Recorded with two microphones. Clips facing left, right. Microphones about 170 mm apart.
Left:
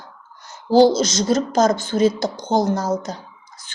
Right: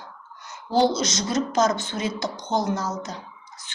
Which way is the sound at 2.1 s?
90° left.